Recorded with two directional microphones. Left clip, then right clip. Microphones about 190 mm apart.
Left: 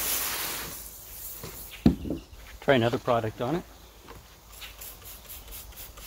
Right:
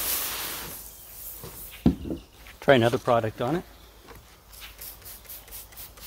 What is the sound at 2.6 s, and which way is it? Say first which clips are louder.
Speech: right 4 dB; 45° right (ahead or behind).